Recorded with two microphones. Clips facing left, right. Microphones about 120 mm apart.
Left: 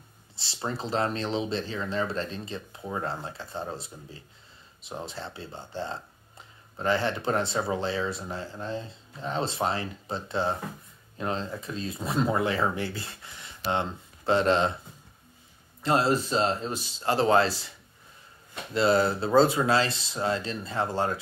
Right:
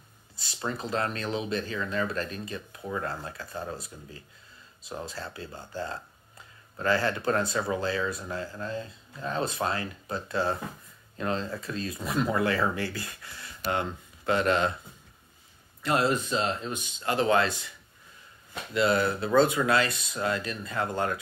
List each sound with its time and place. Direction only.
0.4 s speech: 30° left (ahead or behind)
15.8 s speech: 30° left (ahead or behind)